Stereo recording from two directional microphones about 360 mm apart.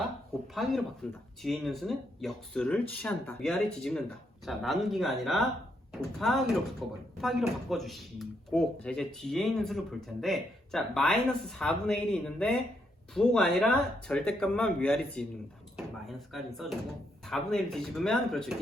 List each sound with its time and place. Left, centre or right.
0.5 s speech: centre